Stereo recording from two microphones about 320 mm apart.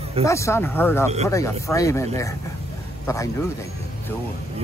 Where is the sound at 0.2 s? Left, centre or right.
Centre.